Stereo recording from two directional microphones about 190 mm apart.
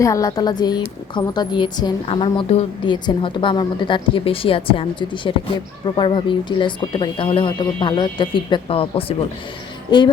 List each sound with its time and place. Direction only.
0.0 s a woman's voice: 15° left (ahead or behind)